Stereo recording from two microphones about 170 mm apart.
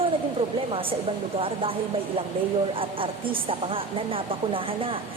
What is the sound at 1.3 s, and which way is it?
A woman's voice, 30° right (ahead or behind).